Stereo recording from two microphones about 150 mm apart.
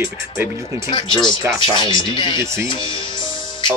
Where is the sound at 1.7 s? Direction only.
35° left (ahead or behind).